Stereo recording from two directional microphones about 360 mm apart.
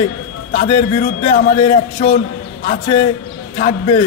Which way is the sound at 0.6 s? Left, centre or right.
Centre.